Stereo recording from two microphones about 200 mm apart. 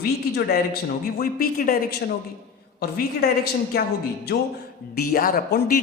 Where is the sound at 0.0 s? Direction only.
50° left (ahead or behind).